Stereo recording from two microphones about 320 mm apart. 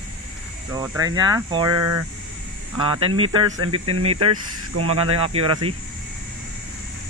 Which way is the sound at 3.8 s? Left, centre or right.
Right.